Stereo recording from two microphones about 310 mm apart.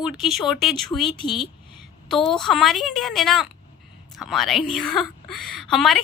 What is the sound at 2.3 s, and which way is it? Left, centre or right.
A woman's voice, centre.